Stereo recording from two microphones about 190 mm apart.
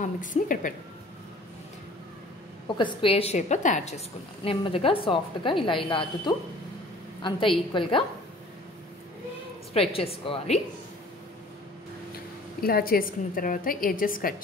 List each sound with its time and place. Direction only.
0.0 s a woman's voice: 45° left (ahead or behind)
2.8 s a woman's voice: 30° left (ahead or behind)
9.8 s a woman's voice: 30° left (ahead or behind)
12.6 s a woman's voice: 50° left (ahead or behind)